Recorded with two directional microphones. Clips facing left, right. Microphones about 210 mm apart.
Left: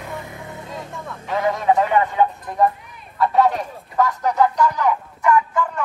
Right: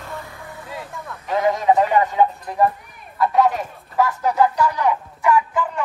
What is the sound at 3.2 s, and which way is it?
Speech, centre (ahead or behind).